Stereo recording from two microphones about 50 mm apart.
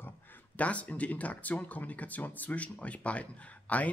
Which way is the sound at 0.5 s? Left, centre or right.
Left.